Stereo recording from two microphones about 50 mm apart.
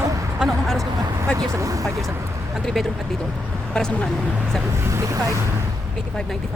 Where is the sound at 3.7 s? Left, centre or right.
Left.